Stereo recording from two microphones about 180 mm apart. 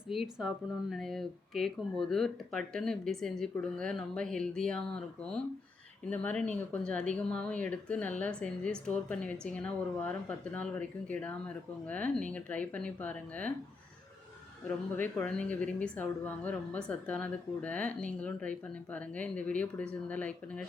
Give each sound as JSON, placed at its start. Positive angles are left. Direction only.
{"t": 0.1, "sound": "speech", "side_deg": 0}
{"t": 14.9, "sound": "speech", "side_deg": 10}